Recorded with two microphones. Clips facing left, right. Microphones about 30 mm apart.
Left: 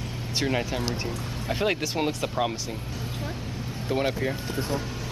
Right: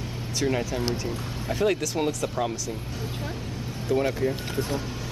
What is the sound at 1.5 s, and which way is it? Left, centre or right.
Speech, left.